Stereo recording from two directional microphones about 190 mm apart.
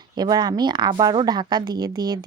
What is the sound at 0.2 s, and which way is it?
A woman's voice, 20° right (ahead or behind).